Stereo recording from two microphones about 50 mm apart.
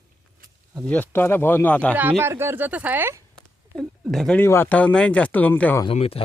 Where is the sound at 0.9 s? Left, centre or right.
Left.